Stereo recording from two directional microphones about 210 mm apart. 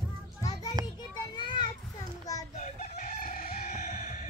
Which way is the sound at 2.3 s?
15° left (ahead or behind).